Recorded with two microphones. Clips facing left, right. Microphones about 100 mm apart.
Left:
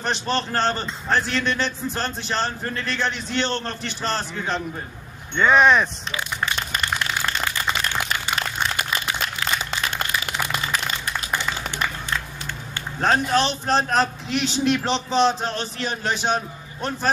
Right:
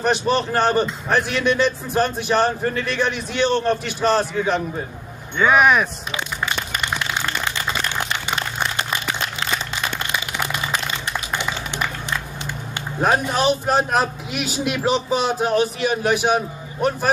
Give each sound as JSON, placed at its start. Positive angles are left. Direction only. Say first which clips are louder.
{"t": 0.0, "sound": "a man's voice", "louder": "right 5 dB", "side_deg": -10}
{"t": 11.3, "sound": "a sound", "louder": "even", "side_deg": -15}
{"t": 13.0, "sound": "a man's voice", "louder": "right 1 dB", "side_deg": -10}